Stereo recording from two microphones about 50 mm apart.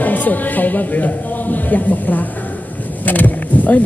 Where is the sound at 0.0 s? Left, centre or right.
Left.